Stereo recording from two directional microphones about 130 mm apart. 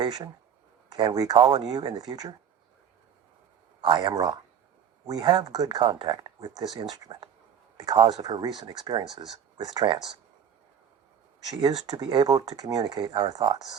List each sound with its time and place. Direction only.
0.0 s speech: 35° right (ahead or behind)
3.8 s speech: 35° right (ahead or behind)
11.4 s speech: 30° right (ahead or behind)